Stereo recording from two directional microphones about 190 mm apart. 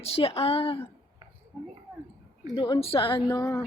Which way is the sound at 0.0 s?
30° left (ahead or behind).